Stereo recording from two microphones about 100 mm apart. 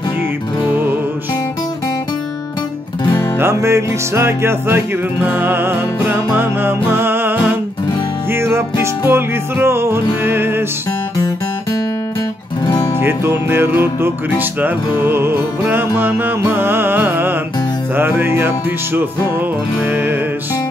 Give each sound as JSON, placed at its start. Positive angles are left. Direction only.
{"t": 3.3, "sound": "music", "side_deg": -25}
{"t": 11.1, "sound": "music", "side_deg": 40}
{"t": 12.6, "sound": "music", "side_deg": 55}
{"t": 13.0, "sound": "music", "side_deg": -20}
{"t": 19.9, "sound": "music", "side_deg": -20}